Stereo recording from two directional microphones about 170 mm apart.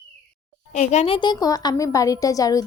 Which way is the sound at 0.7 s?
45° left (ahead or behind).